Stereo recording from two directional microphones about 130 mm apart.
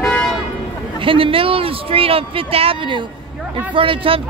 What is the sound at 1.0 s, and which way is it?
Speech, 45° right (ahead or behind).